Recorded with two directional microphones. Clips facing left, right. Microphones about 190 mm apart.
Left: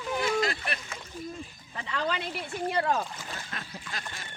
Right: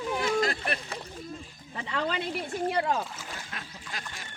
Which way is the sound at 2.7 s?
15° right (ahead or behind).